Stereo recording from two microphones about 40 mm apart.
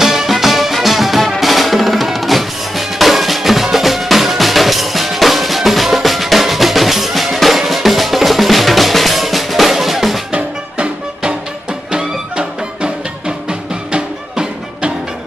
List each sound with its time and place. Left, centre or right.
0.0 s music: centre
1.4 s drum: centre
10.3 s music: right